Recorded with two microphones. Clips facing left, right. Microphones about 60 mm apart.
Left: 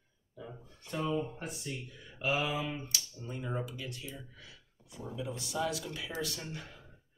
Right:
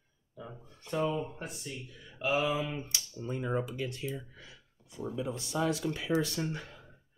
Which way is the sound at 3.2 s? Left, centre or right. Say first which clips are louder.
Right 6 dB; right.